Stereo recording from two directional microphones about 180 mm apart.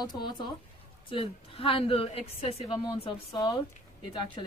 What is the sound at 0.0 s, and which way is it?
A woman's voice, 25° left (ahead or behind).